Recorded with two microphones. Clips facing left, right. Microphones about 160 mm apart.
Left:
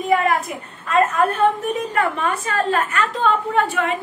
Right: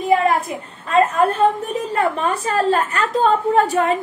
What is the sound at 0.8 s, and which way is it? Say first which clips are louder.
A woman's voice: right 2 dB; 30° right (ahead or behind).